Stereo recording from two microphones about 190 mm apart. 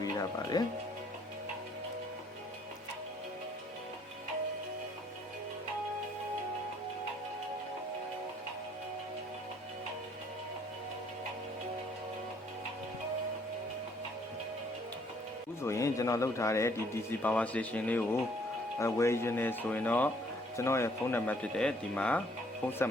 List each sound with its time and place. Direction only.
0.0 s music: 20° left (ahead or behind)
15.6 s a man's voice: 15° left (ahead or behind)